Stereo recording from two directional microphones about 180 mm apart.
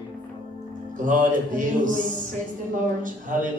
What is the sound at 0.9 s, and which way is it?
A woman's voice, 45° right (ahead or behind).